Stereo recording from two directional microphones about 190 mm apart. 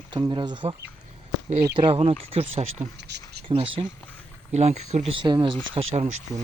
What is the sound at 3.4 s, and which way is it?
Speech, 25° right (ahead or behind).